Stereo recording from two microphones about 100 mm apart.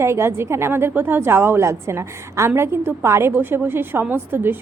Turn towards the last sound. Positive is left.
turn(degrees=-20)  # may be behind; listen again after turning